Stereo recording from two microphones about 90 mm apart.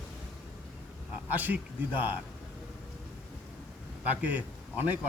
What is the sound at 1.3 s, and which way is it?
Speech, 20° right (ahead or behind).